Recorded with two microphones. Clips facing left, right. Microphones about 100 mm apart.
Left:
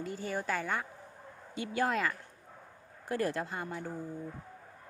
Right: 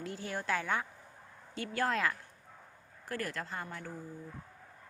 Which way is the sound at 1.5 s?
10° left (ahead or behind).